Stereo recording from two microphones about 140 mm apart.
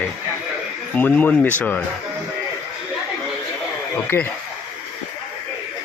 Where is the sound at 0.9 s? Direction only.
10° left (ahead or behind).